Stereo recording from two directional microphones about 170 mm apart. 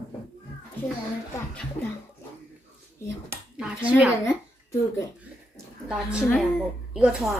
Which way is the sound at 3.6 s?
5° right (ahead or behind).